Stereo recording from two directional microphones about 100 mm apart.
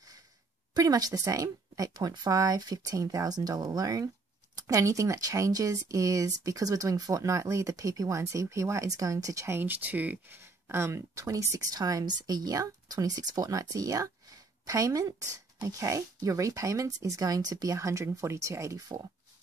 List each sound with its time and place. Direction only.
0.7 s speech: 40° right (ahead or behind)
9.6 s speech: 20° right (ahead or behind); by 19.0 s 35° right (ahead or behind)